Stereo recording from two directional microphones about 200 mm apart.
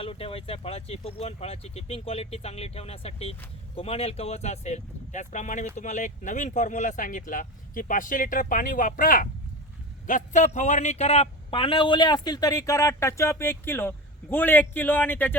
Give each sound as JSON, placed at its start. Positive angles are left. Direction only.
{"t": 0.0, "sound": "a man's voice", "side_deg": 30}